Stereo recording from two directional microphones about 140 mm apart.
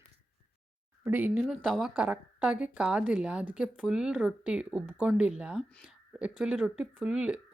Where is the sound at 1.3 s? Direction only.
Centre (ahead or behind).